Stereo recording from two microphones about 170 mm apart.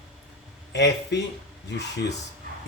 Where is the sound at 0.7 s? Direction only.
90° left.